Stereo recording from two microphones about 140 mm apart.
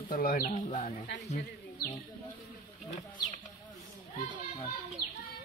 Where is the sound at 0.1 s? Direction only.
90° left; by 1.4 s 55° left (ahead or behind).